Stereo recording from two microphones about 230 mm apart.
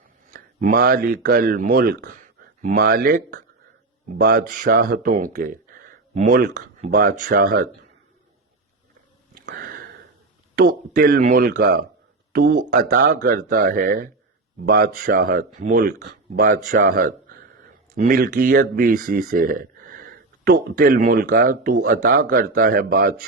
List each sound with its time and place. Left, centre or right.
0.3 s speech: right
9.3 s sniff: right
10.5 s speech: right